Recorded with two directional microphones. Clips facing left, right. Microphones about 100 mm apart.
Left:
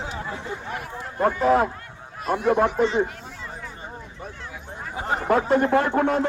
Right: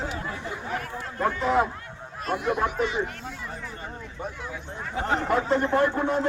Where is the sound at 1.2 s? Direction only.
50° left (ahead or behind).